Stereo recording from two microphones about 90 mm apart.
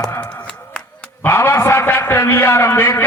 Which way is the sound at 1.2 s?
25° left (ahead or behind).